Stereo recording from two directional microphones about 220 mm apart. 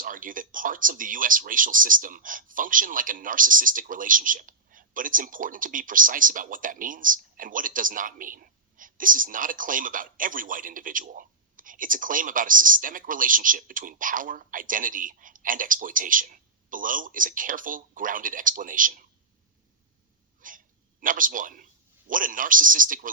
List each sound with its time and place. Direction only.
0.0 s speech: 40° right (ahead or behind)
20.4 s sneeze: 40° right (ahead or behind)
21.0 s a man's voice: 40° right (ahead or behind)